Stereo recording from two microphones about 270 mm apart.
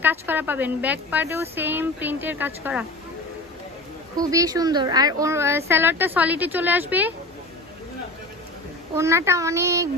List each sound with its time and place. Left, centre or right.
0.0 s speech: centre
4.2 s speech: centre
8.9 s speech: centre